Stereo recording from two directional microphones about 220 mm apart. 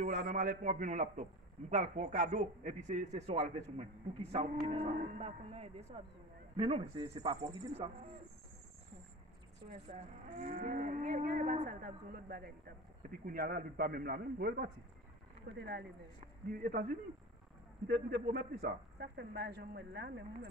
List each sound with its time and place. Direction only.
0.0 s cattle: 35° right (ahead or behind)
4.3 s livestock: 30° right (ahead or behind)
9.7 s cattle: 30° right (ahead or behind)
13.2 s speech: 40° right (ahead or behind)
16.2 s cattle: 40° right (ahead or behind)
17.8 s speech: 50° right (ahead or behind)